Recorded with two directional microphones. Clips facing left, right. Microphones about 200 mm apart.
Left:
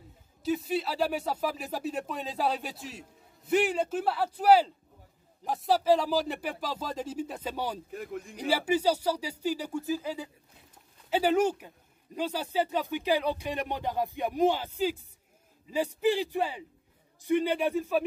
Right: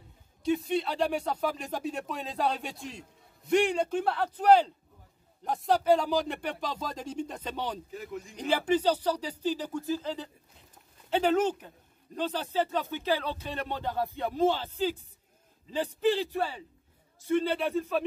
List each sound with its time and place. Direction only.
0.4 s speech: 5° left (ahead or behind)
7.9 s speech: 55° left (ahead or behind)
8.4 s speech: 10° left (ahead or behind)